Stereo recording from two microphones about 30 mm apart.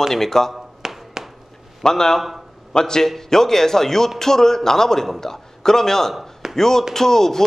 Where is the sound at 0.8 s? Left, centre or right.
Right.